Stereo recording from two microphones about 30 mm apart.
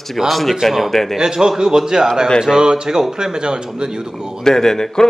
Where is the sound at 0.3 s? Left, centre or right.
Centre.